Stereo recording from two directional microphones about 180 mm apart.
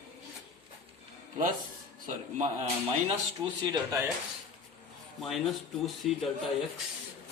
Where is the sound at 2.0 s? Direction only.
40° right (ahead or behind).